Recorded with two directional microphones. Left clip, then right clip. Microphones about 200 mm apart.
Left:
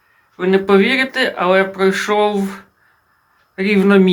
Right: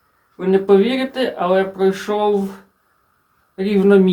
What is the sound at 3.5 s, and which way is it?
Speech, 5° left (ahead or behind).